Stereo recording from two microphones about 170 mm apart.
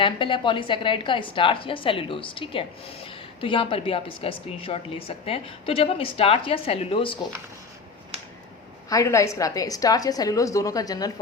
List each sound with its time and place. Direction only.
0.0 s a woman's voice: 30° left (ahead or behind)
8.9 s a woman's voice: 20° left (ahead or behind)